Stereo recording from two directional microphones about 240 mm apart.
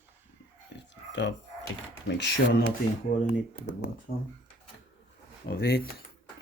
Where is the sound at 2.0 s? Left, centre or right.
Left.